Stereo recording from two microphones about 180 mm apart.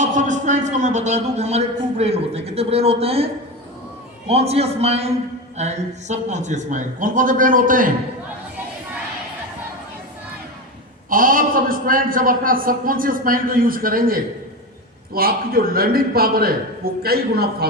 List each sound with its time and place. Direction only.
0.0 s a man's voice: 45° right (ahead or behind)
4.3 s a man's voice: 35° right (ahead or behind)
11.1 s a man's voice: 50° right (ahead or behind)